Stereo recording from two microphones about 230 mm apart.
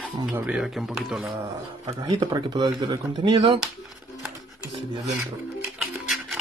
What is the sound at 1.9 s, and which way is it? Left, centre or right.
Speech, centre.